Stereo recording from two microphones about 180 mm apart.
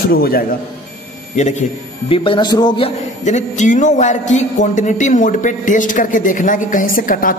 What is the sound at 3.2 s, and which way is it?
A man's voice, 40° left (ahead or behind).